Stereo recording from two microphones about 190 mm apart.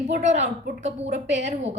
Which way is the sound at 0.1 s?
40° right (ahead or behind).